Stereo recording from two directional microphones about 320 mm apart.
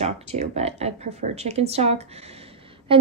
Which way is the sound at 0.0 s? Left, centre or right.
Centre.